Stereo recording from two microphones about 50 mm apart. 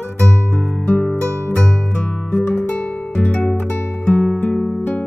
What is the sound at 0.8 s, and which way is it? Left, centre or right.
Music, left.